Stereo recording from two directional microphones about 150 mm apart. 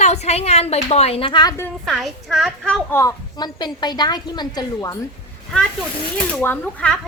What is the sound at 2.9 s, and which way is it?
A woman's voice, 25° left (ahead or behind).